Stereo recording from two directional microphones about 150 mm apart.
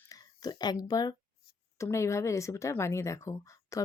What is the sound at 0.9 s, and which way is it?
Speech, 25° left (ahead or behind).